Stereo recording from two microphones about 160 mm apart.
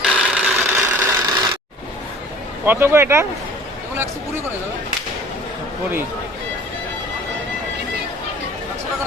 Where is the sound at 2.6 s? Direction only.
15° right (ahead or behind).